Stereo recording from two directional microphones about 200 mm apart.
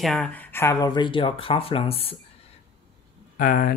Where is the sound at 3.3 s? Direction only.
45° left (ahead or behind).